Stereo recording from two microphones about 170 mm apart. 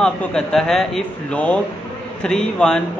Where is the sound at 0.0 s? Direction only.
5° left (ahead or behind).